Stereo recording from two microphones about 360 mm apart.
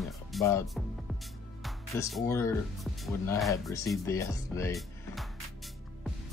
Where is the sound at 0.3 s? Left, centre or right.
Centre.